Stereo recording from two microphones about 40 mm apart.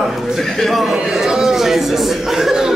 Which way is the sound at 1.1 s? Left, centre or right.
Centre.